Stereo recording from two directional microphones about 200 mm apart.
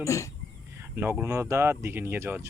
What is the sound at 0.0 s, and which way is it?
Speech, 15° left (ahead or behind).